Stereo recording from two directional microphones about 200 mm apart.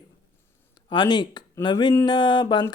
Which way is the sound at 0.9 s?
20° left (ahead or behind).